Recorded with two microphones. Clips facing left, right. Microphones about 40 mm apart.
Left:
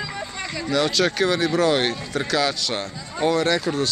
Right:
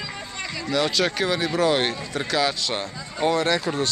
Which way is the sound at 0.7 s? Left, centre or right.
Centre.